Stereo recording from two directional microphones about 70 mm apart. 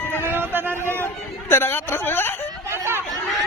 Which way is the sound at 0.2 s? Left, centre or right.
Right.